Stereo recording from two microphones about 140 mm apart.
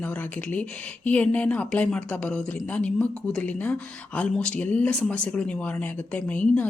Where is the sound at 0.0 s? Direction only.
10° left (ahead or behind).